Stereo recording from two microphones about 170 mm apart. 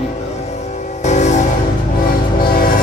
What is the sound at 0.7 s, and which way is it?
Music, 45° left (ahead or behind).